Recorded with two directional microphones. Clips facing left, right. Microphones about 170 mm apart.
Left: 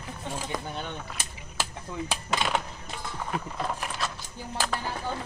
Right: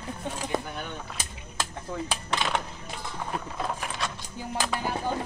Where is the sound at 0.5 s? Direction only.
25° right (ahead or behind).